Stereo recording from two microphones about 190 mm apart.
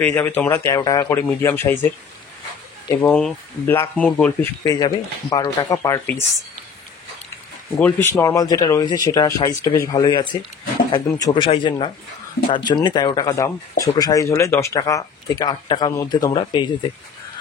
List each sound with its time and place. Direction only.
0.0 s speech: 10° left (ahead or behind)
3.1 s speech: centre (ahead or behind)
4.6 s speech: 20° left (ahead or behind)
8.1 s speech: 15° left (ahead or behind)